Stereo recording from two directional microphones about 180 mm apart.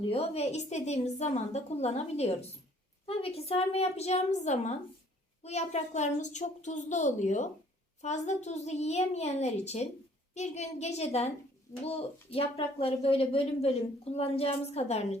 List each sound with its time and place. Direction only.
0.1 s a woman's voice: 35° left (ahead or behind)